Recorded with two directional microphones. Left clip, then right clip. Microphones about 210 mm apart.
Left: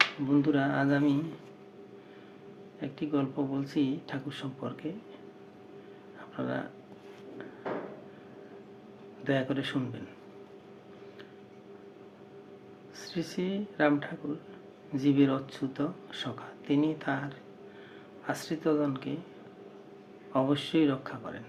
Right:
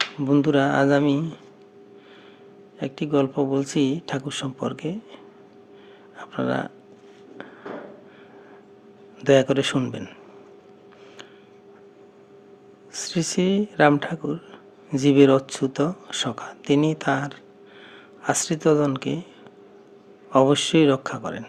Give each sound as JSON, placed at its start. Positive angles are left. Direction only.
{"t": 0.3, "sound": "speech", "side_deg": -50}
{"t": 2.8, "sound": "speech", "side_deg": -50}
{"t": 6.1, "sound": "a sound", "side_deg": -50}
{"t": 9.2, "sound": "speech", "side_deg": -50}
{"t": 12.9, "sound": "speech", "side_deg": -55}
{"t": 20.3, "sound": "speech", "side_deg": -50}